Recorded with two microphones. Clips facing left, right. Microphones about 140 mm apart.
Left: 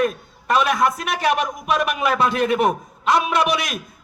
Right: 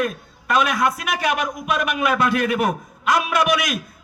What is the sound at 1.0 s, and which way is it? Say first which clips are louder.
A man's voice: left 2 dB; 30° left (ahead or behind).